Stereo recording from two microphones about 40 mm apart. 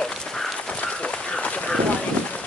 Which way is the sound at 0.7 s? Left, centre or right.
Left.